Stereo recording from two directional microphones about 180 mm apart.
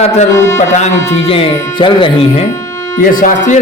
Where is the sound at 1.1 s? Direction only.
35° left (ahead or behind).